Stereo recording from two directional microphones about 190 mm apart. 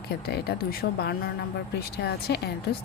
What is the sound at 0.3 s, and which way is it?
Speech, 60° left (ahead or behind).